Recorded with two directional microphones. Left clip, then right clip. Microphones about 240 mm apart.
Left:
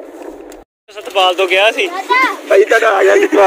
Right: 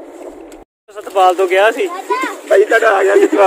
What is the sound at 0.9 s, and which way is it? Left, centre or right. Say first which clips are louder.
Speech: right 1 dB; right.